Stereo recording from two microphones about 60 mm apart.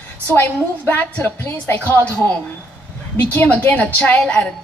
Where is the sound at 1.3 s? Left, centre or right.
Left.